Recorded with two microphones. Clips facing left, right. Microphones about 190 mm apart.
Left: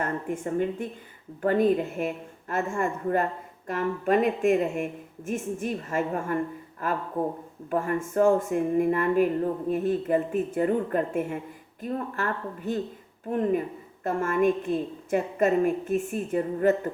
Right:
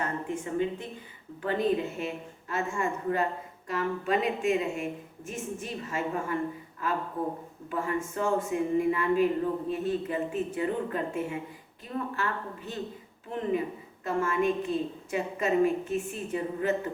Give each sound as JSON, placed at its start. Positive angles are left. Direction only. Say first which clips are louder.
{"t": 0.0, "sound": "speech", "louder": "left 3 dB", "side_deg": 50}
{"t": 14.0, "sound": "speech", "louder": "left 4 dB", "side_deg": 50}